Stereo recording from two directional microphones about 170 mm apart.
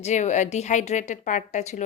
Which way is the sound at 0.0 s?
45° left (ahead or behind).